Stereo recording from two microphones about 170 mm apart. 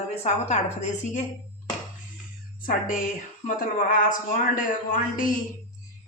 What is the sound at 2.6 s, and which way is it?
A man's voice, 55° left (ahead or behind).